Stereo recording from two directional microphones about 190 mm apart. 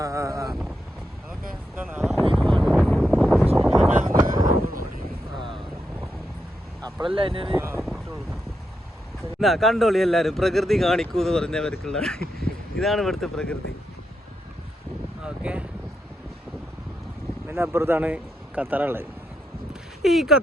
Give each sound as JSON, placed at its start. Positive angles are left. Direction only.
{"t": 0.0, "sound": "vehicle", "side_deg": -15}
{"t": 2.0, "sound": "a sound", "side_deg": 0}
{"t": 2.3, "sound": "vehicle", "side_deg": 5}
{"t": 4.2, "sound": "vehicle", "side_deg": -45}
{"t": 6.8, "sound": "speech", "side_deg": -25}
{"t": 7.6, "sound": "speech", "side_deg": -10}
{"t": 9.4, "sound": "a man's voice", "side_deg": 0}
{"t": 15.2, "sound": "a sound", "side_deg": -5}
{"t": 17.5, "sound": "a man's voice", "side_deg": -15}